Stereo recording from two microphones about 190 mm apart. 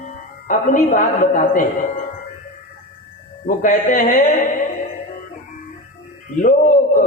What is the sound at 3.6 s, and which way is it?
Speech, 40° left (ahead or behind).